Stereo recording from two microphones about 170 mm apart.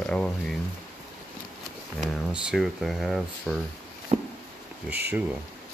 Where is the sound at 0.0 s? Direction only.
5° left (ahead or behind).